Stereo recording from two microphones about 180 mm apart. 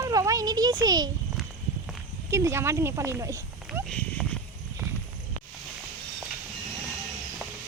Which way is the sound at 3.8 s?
5° left (ahead or behind).